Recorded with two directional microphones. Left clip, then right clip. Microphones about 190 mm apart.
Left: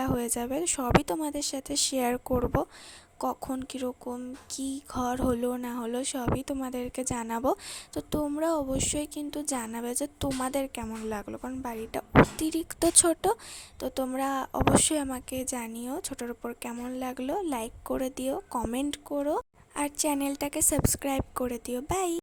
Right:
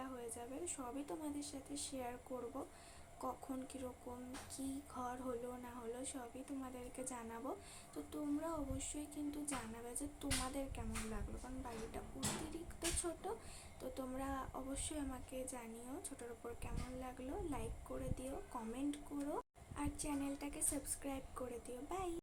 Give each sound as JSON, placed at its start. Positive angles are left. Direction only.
{"t": 0.0, "sound": "a woman's voice", "side_deg": 60}
{"t": 3.2, "sound": "a woman's voice", "side_deg": 45}
{"t": 13.3, "sound": "a woman's voice", "side_deg": 55}